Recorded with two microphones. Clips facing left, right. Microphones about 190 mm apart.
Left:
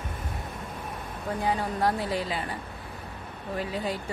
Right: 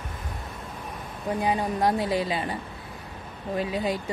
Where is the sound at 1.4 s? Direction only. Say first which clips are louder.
Right 2 dB; 15° right (ahead or behind).